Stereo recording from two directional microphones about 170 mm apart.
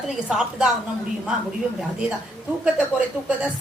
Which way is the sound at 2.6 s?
5° right (ahead or behind).